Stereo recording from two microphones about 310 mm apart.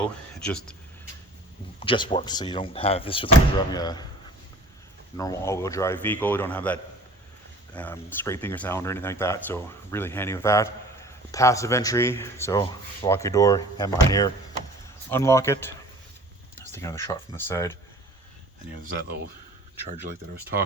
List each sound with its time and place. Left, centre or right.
0.0 s speech: centre
1.8 s speech: centre
5.1 s speech: centre
18.8 s speech: right